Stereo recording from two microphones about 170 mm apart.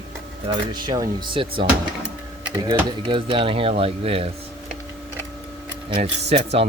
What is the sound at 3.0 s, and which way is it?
Speech, 30° right (ahead or behind).